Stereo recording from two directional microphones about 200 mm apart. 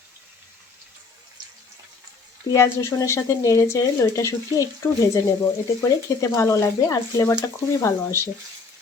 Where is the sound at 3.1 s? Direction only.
15° left (ahead or behind).